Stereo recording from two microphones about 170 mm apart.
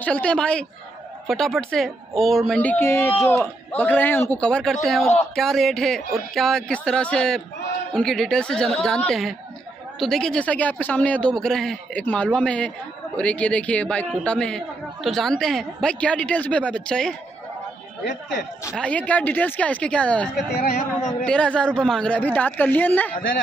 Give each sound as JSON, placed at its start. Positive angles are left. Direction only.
{"t": 0.0, "sound": "a man's voice", "side_deg": 5}
{"t": 18.8, "sound": "a man's voice", "side_deg": 10}
{"t": 20.5, "sound": "speech", "side_deg": 60}
{"t": 21.3, "sound": "a man's voice", "side_deg": 5}